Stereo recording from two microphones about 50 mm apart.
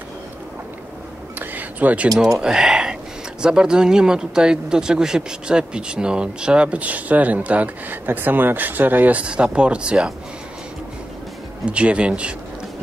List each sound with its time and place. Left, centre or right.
1.4 s a sound: right
2.3 s speech: centre; by 9.2 s right
9.2 s speech: right
11.6 s speech: right